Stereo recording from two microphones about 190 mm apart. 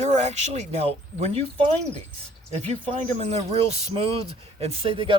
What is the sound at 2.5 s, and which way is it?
Speech, 35° right (ahead or behind).